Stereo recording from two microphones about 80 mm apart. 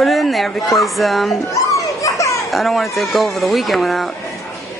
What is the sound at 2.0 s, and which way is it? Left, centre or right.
Children playing, left.